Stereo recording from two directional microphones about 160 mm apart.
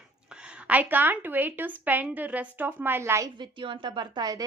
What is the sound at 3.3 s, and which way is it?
Speech, 30° right (ahead or behind).